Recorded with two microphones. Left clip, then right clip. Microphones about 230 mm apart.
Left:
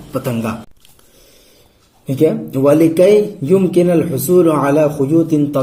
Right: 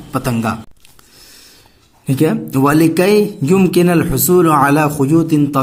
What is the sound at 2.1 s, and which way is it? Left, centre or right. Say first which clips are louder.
Speech: left 1 dB; right.